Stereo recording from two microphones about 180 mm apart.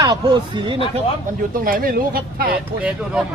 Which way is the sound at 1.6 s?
50° right (ahead or behind).